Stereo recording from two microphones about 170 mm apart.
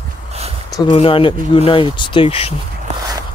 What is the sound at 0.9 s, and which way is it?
Speech, 30° left (ahead or behind).